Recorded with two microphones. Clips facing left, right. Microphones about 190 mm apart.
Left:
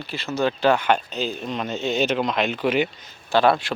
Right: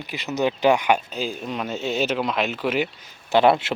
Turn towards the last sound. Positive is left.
turn(degrees=-20)  # may be behind; listen again after turning